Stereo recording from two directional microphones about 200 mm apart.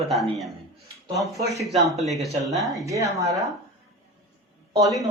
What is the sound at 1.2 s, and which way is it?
Speech, 15° right (ahead or behind).